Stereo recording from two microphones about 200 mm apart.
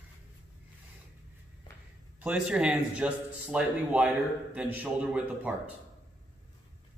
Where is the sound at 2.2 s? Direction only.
5° right (ahead or behind).